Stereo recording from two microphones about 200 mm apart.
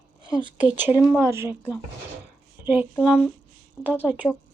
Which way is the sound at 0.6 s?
10° right (ahead or behind).